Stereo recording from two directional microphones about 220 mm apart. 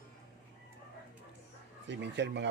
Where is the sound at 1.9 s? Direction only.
50° right (ahead or behind).